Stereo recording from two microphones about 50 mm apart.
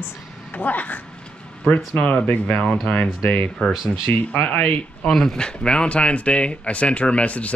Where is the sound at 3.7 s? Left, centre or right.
Centre.